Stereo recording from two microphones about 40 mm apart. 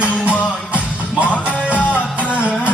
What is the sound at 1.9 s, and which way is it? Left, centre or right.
Music, right.